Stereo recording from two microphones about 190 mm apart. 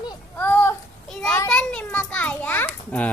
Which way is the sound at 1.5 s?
5° left (ahead or behind).